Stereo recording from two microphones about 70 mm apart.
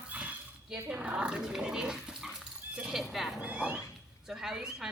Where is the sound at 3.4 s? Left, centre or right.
Centre.